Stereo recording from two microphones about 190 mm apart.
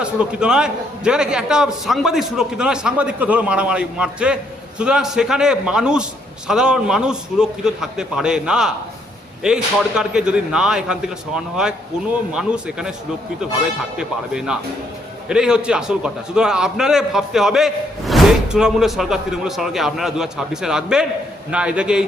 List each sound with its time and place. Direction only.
0.0 s a man's voice: 5° right (ahead or behind)
13.9 s a man's voice: 5° right (ahead or behind)